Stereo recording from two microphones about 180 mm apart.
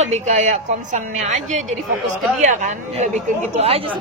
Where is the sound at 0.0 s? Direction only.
40° right (ahead or behind).